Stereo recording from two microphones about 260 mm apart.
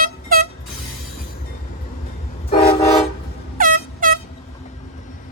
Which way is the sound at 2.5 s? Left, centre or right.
Left.